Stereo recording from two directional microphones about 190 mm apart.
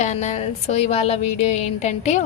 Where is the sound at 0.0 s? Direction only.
35° left (ahead or behind).